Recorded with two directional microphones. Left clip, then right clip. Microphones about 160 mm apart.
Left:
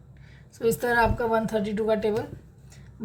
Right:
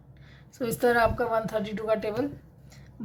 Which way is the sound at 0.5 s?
20° right (ahead or behind).